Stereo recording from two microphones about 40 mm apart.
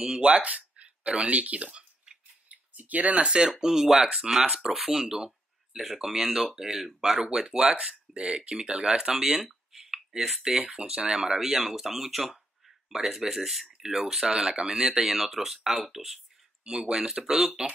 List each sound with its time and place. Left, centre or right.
0.2 s speech: right
2.5 s a sound: right
3.3 s speech: right
3.5 s speech: centre
9.1 s speech: centre
9.9 s a sound: centre
10.7 s speech: right
15.0 s speech: centre
16.6 s speech: centre